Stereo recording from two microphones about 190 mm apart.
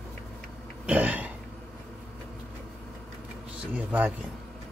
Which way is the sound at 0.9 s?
10° right (ahead or behind).